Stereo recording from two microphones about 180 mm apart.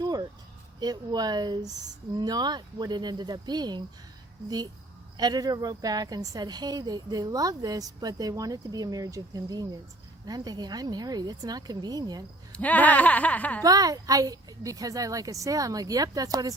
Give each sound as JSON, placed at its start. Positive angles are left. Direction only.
{"t": 0.0, "sound": "a sound", "side_deg": -20}
{"t": 0.8, "sound": "a woman's voice", "side_deg": -20}
{"t": 12.5, "sound": "speech", "side_deg": 10}
{"t": 13.6, "sound": "a woman's voice", "side_deg": -20}